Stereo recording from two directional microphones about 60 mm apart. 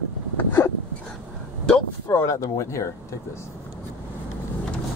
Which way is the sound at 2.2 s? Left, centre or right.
Left.